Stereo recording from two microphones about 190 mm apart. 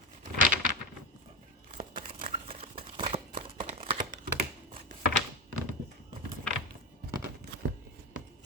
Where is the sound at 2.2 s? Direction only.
30° right (ahead or behind).